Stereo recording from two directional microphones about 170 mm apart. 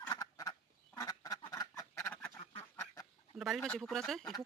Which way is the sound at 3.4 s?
Centre (ahead or behind).